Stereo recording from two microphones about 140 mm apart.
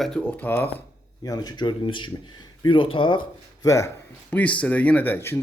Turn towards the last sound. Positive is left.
turn(degrees=15)  # may be behind; listen again after turning